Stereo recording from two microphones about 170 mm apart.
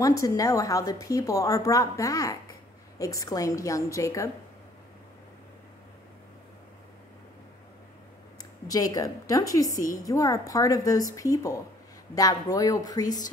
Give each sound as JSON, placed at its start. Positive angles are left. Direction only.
{"t": 0.0, "sound": "a woman's voice", "side_deg": 20}
{"t": 8.4, "sound": "a woman's voice", "side_deg": 20}